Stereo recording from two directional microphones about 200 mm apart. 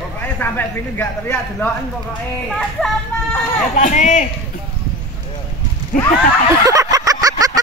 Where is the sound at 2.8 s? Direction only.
5° left (ahead or behind).